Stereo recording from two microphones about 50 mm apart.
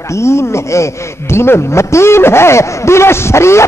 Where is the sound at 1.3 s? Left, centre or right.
Left.